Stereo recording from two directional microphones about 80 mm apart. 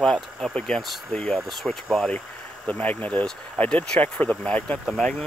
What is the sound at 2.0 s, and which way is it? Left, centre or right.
Speech, centre.